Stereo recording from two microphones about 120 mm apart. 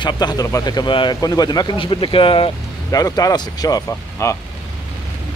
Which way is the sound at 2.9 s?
30° left (ahead or behind).